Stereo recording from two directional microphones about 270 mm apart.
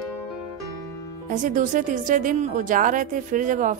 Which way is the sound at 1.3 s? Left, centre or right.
Right.